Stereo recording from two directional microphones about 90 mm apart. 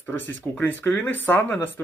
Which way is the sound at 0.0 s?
20° left (ahead or behind).